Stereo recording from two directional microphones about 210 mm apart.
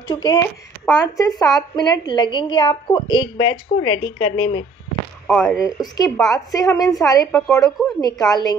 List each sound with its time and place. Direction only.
0.1 s speech: 20° left (ahead or behind)
5.2 s speech: 5° left (ahead or behind)
5.8 s a woman's voice: 15° left (ahead or behind)
8.0 s speech: 20° left (ahead or behind)